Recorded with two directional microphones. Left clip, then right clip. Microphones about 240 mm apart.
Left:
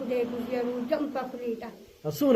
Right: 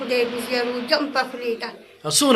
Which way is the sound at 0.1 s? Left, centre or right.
Centre.